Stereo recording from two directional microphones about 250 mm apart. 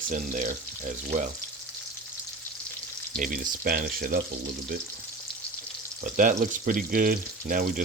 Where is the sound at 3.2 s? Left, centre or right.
Right.